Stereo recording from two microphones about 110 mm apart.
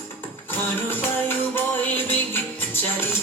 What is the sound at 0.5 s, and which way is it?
Music, 20° left (ahead or behind).